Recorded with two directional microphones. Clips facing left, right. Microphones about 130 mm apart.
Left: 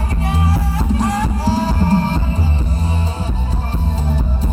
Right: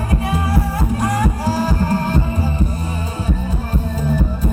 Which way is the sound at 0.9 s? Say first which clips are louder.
Even; 50° right (ahead or behind).